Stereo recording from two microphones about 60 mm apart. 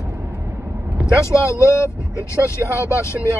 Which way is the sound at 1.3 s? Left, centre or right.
Left.